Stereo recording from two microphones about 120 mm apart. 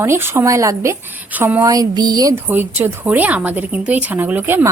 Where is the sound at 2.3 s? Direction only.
15° right (ahead or behind).